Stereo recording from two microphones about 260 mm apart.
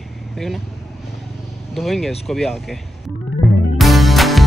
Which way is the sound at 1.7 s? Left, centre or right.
Centre.